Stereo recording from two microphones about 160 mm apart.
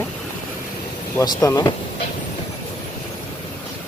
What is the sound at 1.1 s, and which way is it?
Speech, 25° left (ahead or behind).